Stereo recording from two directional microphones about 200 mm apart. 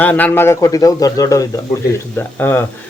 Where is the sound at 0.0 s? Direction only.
10° left (ahead or behind).